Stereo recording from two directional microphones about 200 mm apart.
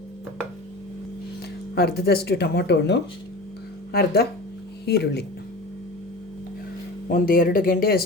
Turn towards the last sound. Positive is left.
turn(degrees=45)  # may be behind; listen again after turning